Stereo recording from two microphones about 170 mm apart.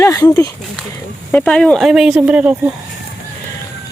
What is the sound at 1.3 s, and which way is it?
Speech, 5° left (ahead or behind).